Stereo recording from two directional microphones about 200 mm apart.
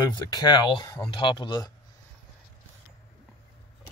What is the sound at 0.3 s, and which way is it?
Speech, 20° left (ahead or behind).